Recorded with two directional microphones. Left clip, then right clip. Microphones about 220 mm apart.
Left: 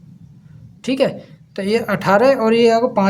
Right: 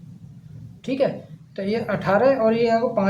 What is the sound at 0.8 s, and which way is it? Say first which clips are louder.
A woman's voice: left 4 dB; 40° left (ahead or behind).